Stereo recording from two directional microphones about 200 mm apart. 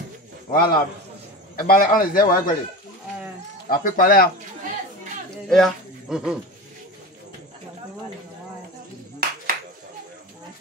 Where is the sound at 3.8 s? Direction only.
45° left (ahead or behind).